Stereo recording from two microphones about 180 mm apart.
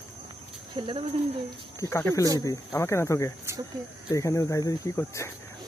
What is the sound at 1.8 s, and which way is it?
Speech, 15° left (ahead or behind).